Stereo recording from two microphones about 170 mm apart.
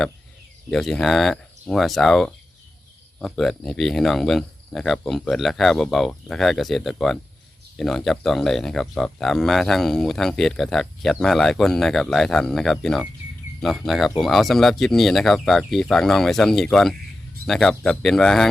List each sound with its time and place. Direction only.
0.7 s speech: centre (ahead or behind)